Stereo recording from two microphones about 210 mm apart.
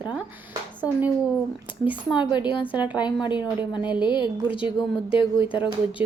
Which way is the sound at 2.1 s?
20° left (ahead or behind).